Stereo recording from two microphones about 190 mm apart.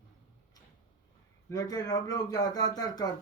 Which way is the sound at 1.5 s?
20° left (ahead or behind).